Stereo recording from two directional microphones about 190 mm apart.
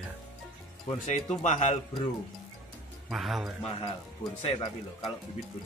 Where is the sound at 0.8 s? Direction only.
35° left (ahead or behind).